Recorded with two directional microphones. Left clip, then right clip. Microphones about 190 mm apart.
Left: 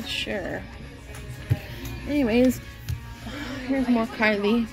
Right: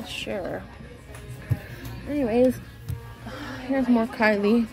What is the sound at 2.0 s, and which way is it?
Speech, 20° left (ahead or behind).